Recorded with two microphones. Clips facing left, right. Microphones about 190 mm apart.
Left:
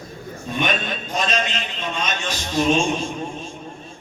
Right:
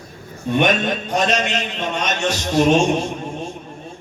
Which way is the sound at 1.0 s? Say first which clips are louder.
Right 3 dB; 70° right (ahead or behind).